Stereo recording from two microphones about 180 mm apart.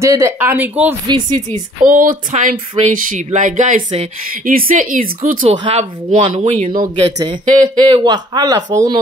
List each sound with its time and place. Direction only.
0.0 s speech: 15° right (ahead or behind)
1.0 s speech: 25° right (ahead or behind)
1.5 s speech: 45° right (ahead or behind)
4.5 s speech: 50° right (ahead or behind)
5.7 s speech: 30° right (ahead or behind)